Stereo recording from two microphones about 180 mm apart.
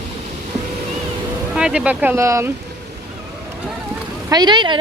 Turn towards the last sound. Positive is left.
turn(degrees=-25)  # may be behind; listen again after turning